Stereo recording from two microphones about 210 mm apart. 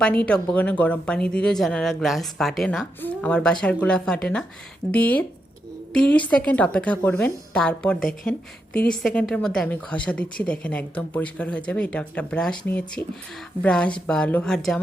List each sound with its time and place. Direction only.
0.0 s speech: 5° left (ahead or behind)
7.9 s speech: 40° left (ahead or behind)
8.9 s speech: 5° left (ahead or behind)